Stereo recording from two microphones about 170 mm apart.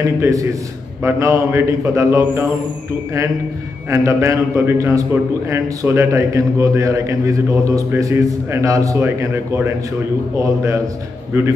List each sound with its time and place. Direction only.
0.2 s a man's voice: 20° right (ahead or behind)
3.9 s a man's voice: 15° right (ahead or behind)